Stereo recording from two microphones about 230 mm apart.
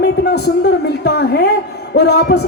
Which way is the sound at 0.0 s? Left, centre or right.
Left.